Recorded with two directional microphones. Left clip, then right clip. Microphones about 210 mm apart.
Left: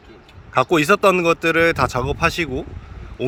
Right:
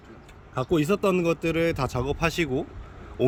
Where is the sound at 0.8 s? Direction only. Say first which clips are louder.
Left 8 dB; centre (ahead or behind).